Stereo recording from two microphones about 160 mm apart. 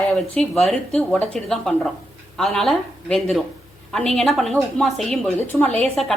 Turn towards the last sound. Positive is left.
turn(degrees=5)  # may be behind; listen again after turning